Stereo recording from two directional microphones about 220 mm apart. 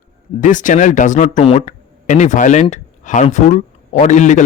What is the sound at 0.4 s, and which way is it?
Speech, 35° left (ahead or behind).